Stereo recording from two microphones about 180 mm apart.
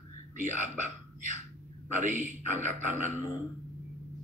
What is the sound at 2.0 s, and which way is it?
A man's voice, 45° right (ahead or behind).